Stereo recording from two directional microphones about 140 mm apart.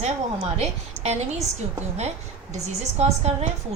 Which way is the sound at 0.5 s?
50° right (ahead or behind).